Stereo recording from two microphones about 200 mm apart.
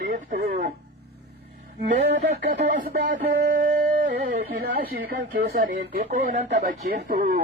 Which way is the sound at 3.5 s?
40° right (ahead or behind).